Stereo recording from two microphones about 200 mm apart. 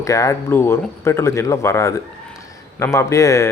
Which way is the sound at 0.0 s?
15° left (ahead or behind).